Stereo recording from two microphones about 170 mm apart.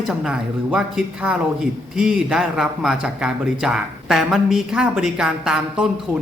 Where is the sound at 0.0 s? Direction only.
Centre (ahead or behind).